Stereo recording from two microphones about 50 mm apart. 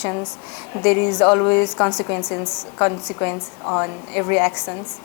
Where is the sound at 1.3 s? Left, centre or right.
Left.